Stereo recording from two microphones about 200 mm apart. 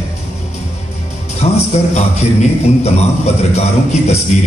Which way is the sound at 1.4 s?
35° left (ahead or behind).